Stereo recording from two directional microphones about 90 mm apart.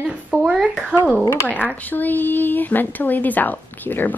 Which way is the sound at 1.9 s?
20° left (ahead or behind).